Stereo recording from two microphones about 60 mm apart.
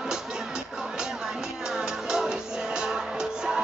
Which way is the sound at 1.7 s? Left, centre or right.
Centre.